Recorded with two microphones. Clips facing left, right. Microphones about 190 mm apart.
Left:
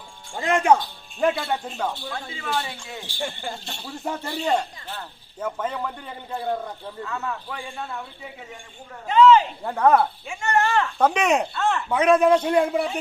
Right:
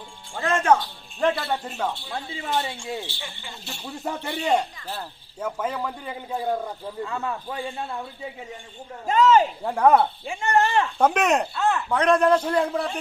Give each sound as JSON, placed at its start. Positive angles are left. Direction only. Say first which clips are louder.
{"t": 0.3, "sound": "a man's voice", "louder": "left 1 dB", "side_deg": 15}
{"t": 1.6, "sound": "speech", "louder": "even", "side_deg": -5}
{"t": 2.3, "sound": "speech", "louder": "right 2 dB", "side_deg": -30}
{"t": 3.2, "sound": "speech", "louder": "left 9 dB", "side_deg": 45}
{"t": 3.6, "sound": "a man's voice", "louder": "even", "side_deg": 0}
{"t": 7.0, "sound": "speech", "louder": "right 1 dB", "side_deg": -30}
{"t": 9.0, "sound": "speech", "louder": "left 2 dB", "side_deg": -45}
{"t": 9.6, "sound": "a man's voice", "louder": "left 1 dB", "side_deg": -10}
{"t": 10.2, "sound": "speech", "louder": "right 1 dB", "side_deg": -35}
{"t": 10.6, "sound": "a man's voice", "louder": "even", "side_deg": -15}